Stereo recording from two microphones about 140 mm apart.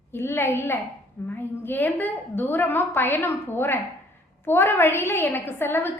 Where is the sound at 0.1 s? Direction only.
15° left (ahead or behind).